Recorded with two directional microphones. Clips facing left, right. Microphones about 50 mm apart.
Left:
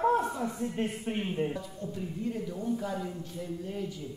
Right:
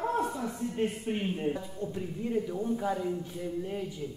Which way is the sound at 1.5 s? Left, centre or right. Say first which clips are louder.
Right 3 dB; right.